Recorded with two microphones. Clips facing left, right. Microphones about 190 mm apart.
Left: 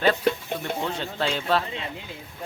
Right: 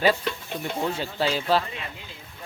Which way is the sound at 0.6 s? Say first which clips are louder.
Right 3 dB; 5° right (ahead or behind).